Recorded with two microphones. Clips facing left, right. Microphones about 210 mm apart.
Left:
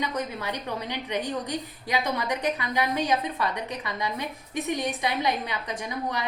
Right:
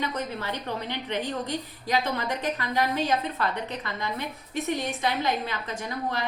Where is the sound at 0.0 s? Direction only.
15° left (ahead or behind).